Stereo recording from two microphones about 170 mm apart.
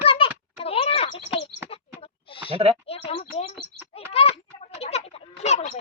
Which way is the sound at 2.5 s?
35° right (ahead or behind).